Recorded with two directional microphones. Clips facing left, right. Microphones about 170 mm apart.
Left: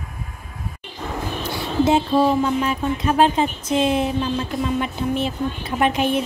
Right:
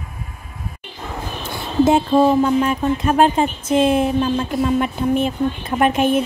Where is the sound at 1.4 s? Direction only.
50° right (ahead or behind).